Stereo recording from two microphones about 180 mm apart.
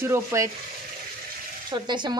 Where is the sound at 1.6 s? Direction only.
25° right (ahead or behind).